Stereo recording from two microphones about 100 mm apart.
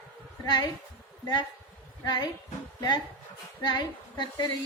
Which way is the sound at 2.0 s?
45° left (ahead or behind).